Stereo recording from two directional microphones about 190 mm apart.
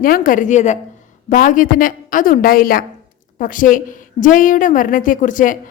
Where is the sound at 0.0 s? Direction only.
45° left (ahead or behind).